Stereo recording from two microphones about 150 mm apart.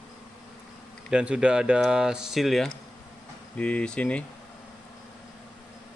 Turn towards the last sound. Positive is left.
turn(degrees=10)  # may be behind; listen again after turning